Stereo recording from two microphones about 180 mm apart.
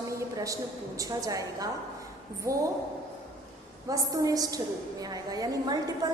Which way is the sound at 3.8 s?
20° right (ahead or behind).